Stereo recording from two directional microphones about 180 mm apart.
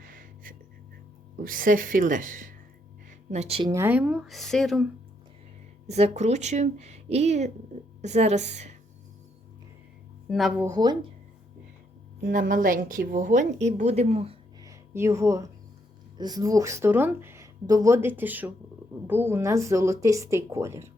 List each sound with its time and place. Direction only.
0.0 s music: 50° right (ahead or behind)
1.4 s a woman's voice: 50° right (ahead or behind); by 3.7 s 35° right (ahead or behind)
3.7 s speech: 10° right (ahead or behind)
5.9 s speech: 40° right (ahead or behind)
10.2 s speech: centre (ahead or behind)
10.6 s speech: 20° right (ahead or behind)
12.2 s a woman's voice: 50° right (ahead or behind)
14.6 s a sound: 15° right (ahead or behind)
16.1 s speech: 20° right (ahead or behind)